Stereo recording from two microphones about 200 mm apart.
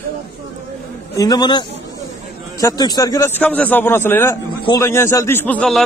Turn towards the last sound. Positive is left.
turn(degrees=5)  # may be behind; listen again after turning